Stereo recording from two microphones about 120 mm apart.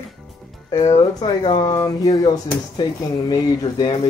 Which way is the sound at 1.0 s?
40° left (ahead or behind).